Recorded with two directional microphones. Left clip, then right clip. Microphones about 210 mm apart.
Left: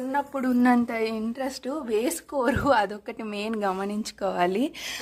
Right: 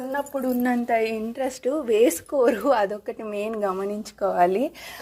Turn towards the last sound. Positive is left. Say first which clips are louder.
# right 3 dB
turn(degrees=25)  # may be behind; listen again after turning